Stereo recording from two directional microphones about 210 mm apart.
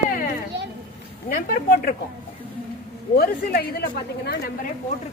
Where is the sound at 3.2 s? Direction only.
50° left (ahead or behind).